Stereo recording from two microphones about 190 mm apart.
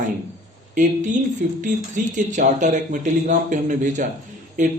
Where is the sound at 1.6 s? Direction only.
40° right (ahead or behind).